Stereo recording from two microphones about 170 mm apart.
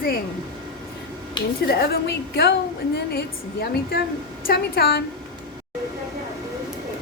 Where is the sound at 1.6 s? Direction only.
70° left (ahead or behind).